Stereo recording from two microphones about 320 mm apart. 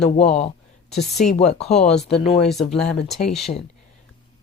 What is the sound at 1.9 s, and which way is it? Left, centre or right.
Speech, centre.